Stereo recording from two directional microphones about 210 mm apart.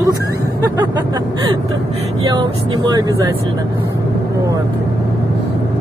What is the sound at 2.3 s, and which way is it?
Speech, 20° right (ahead or behind).